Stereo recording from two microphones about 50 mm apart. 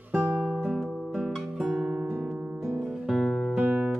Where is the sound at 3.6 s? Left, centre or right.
Centre.